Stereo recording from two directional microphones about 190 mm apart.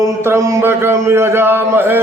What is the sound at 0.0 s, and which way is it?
Mantra, 15° right (ahead or behind).